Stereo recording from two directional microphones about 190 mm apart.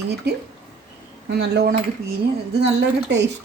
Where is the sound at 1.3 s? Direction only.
60° right (ahead or behind).